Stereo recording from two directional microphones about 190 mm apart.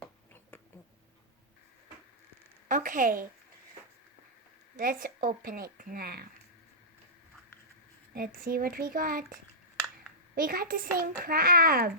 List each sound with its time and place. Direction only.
2.6 s a woman's voice: 45° right (ahead or behind)
4.8 s a child's voice: 45° right (ahead or behind)
8.1 s a child's voice: 50° right (ahead or behind)